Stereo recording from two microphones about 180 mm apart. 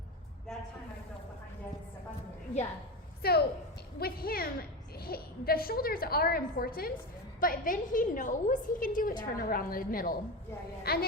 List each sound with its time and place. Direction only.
3.2 s a woman's voice: 60° left (ahead or behind)